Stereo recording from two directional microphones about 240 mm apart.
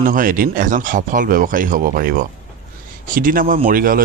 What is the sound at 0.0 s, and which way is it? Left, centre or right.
Speech, right.